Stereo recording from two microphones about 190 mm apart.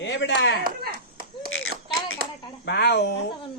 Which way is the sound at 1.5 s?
90° left.